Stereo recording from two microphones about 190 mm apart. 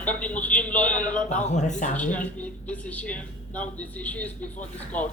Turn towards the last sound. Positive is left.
turn(degrees=5)  # may be behind; listen again after turning